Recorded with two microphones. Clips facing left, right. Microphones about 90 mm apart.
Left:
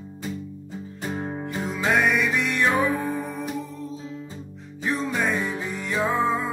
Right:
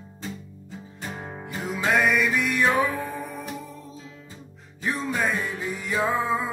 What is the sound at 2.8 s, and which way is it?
Music, 15° left (ahead or behind).